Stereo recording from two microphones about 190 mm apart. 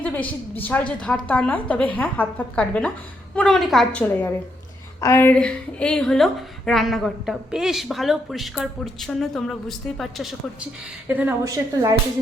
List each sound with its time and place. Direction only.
0.0 s a woman's voice: 5° left (ahead or behind); by 11.9 s 20° right (ahead or behind)